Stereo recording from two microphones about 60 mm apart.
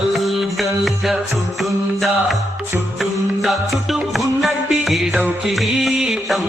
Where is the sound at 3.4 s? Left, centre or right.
Centre.